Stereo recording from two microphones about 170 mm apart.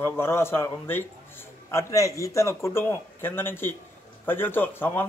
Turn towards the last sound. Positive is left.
turn(degrees=10)  # may be behind; listen again after turning